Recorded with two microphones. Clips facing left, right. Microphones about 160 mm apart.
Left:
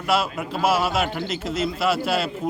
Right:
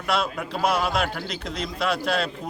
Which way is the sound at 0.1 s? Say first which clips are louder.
Left 3 dB; 5° left (ahead or behind).